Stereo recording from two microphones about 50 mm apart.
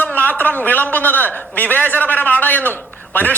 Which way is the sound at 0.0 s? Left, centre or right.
Left.